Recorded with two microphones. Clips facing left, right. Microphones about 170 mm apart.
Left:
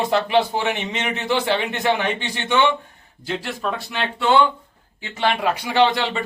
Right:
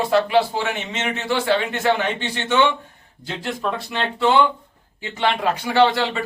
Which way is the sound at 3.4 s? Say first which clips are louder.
Right 1 dB; 5° left (ahead or behind).